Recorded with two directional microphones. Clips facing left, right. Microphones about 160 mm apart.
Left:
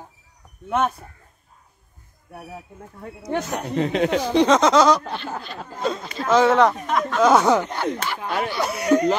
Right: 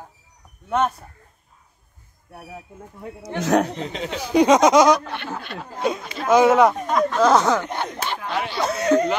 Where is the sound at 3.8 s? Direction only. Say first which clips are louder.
Left 8 dB; 65° left (ahead or behind).